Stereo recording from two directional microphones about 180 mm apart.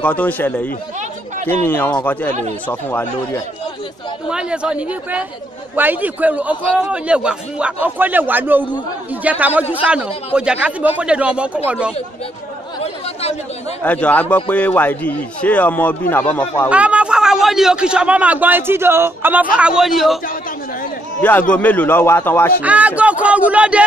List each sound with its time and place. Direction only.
0.0 s a man's voice: 10° left (ahead or behind)
4.3 s a man's voice: 5° right (ahead or behind)
12.8 s chatter: 35° left (ahead or behind)
13.8 s a man's voice: 10° left (ahead or behind)
16.6 s a man's voice: 5° right (ahead or behind)
21.2 s a man's voice: 10° left (ahead or behind)
22.6 s a man's voice: 10° right (ahead or behind)